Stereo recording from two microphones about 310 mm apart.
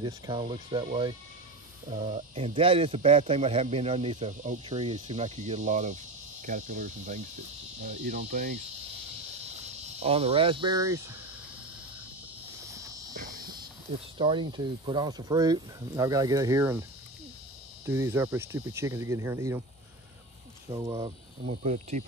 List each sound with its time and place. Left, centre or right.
0.0 s speech: centre
1.9 s a man's voice: right
9.9 s speech: centre
13.1 s insect: right
14.1 s speech: centre
17.8 s speech: centre
20.7 s speech: centre